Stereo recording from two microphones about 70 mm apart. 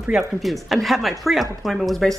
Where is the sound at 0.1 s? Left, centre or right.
Centre.